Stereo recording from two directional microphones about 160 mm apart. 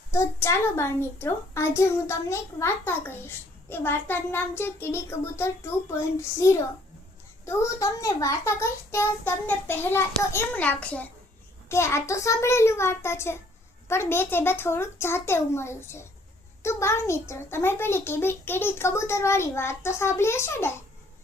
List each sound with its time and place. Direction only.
0.1 s a child's voice: 15° left (ahead or behind)